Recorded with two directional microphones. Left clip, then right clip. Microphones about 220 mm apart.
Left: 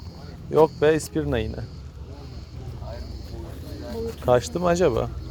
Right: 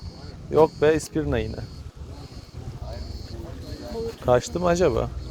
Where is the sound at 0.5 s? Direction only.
Centre (ahead or behind).